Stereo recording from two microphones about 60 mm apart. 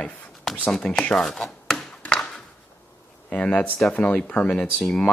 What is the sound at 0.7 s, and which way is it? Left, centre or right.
Speech, centre.